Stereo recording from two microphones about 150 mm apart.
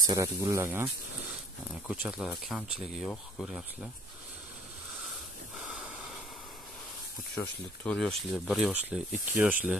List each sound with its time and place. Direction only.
0.0 s speech: 25° right (ahead or behind)
1.9 s speech: 5° right (ahead or behind)
5.7 s gasp: 5° right (ahead or behind)
7.4 s speech: 10° left (ahead or behind); by 9.8 s 10° right (ahead or behind)